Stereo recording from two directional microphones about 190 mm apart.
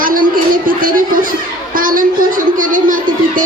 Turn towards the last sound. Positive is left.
turn(degrees=-45)  # may be behind; listen again after turning